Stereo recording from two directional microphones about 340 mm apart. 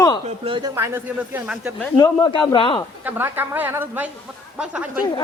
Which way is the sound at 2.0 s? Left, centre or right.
Centre.